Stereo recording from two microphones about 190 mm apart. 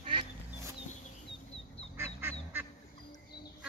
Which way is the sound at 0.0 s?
25° right (ahead or behind).